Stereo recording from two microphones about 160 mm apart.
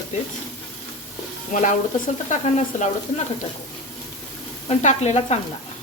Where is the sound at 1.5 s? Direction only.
55° left (ahead or behind).